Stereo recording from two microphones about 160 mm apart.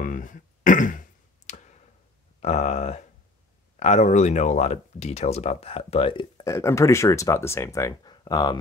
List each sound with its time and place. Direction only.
0.0 s clicking: 55° left (ahead or behind)
2.4 s speech: 45° left (ahead or behind); by 8.5 s 25° left (ahead or behind)